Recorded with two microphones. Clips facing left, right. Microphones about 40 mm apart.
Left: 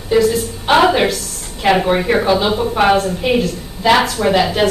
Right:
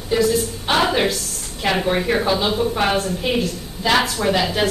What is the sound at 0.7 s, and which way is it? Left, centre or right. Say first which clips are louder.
Speech: left 6 dB; left.